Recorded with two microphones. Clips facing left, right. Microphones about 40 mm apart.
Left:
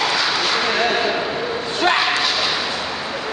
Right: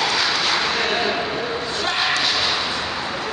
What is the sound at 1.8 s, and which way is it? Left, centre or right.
Slam, left.